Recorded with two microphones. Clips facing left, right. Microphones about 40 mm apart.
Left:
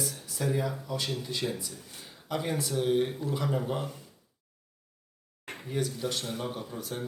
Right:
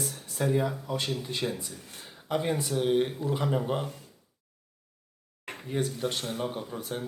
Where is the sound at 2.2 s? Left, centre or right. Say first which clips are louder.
Right 3 dB; centre.